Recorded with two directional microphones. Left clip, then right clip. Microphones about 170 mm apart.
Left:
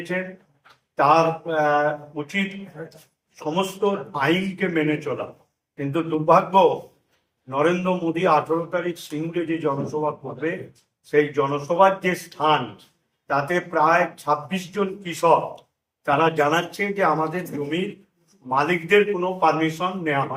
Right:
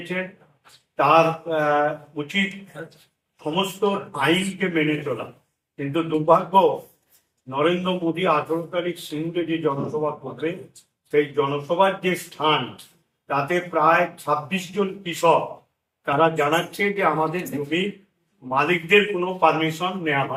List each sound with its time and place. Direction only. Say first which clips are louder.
0.9 s a man's voice: even; 15° left (ahead or behind)
3.4 s a man's voice: even; 15° left (ahead or behind)
18.4 s a man's voice: even; 15° left (ahead or behind)